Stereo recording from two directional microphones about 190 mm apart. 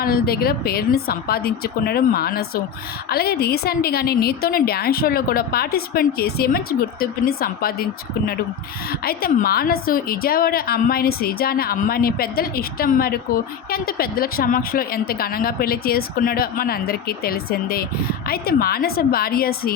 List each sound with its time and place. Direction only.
0.0 s a woman's voice: 55° left (ahead or behind)
8.9 s a woman's voice: 50° left (ahead or behind)